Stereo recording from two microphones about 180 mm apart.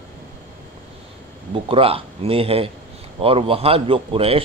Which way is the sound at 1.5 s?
30° right (ahead or behind).